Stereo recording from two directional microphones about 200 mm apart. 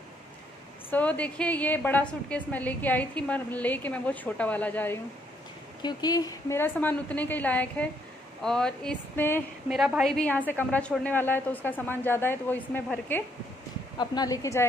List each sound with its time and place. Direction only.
0.8 s a woman's voice: 10° left (ahead or behind)
5.8 s a woman's voice: 20° left (ahead or behind)
9.7 s a woman's voice: 5° right (ahead or behind)
13.9 s a woman's voice: 20° left (ahead or behind)